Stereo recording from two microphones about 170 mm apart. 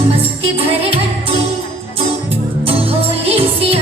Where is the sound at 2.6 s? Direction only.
35° right (ahead or behind).